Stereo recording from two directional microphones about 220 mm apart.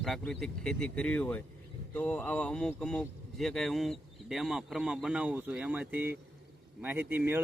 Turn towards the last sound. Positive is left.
turn(degrees=-10)  # may be behind; listen again after turning